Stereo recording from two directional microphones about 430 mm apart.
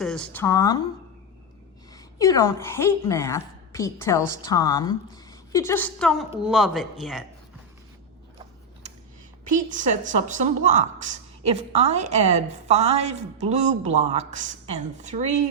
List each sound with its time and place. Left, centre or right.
0.0 s a woman's voice: centre
1.9 s a woman's voice: centre
9.4 s a woman's voice: centre